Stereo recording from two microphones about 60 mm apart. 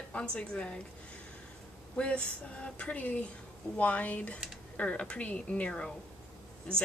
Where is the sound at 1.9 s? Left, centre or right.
Centre.